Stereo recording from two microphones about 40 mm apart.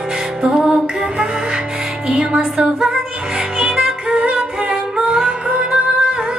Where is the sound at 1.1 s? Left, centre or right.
Right.